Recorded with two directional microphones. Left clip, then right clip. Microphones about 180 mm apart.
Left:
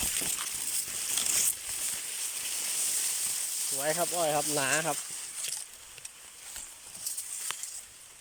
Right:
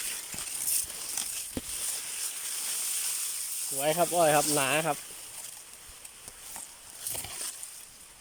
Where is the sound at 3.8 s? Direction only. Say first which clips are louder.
Right 5 dB; 5° right (ahead or behind).